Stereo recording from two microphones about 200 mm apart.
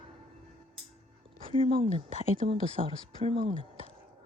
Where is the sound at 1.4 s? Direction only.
25° right (ahead or behind).